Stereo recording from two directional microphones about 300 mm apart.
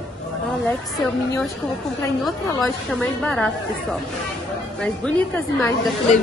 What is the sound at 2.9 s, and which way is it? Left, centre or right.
Speech, centre.